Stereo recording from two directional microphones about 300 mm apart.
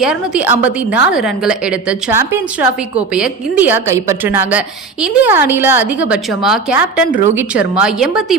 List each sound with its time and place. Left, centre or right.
0.0 s a woman's voice: centre